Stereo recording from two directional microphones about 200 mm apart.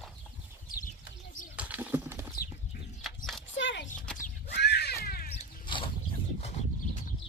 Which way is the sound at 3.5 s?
65° left (ahead or behind).